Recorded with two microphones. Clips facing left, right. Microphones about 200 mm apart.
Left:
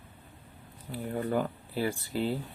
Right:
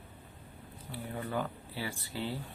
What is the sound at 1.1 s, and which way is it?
Speech, 40° left (ahead or behind).